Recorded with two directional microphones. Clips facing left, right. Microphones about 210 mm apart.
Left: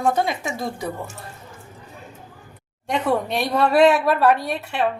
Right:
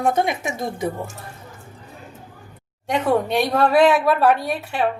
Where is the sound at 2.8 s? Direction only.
Centre (ahead or behind).